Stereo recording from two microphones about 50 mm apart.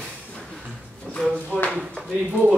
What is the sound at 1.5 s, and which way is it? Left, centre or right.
Speech, left.